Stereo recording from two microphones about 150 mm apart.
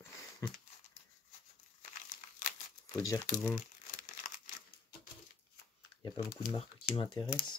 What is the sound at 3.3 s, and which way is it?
Speech, 5° left (ahead or behind).